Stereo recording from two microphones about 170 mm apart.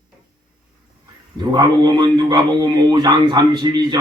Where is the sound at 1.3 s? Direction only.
25° right (ahead or behind).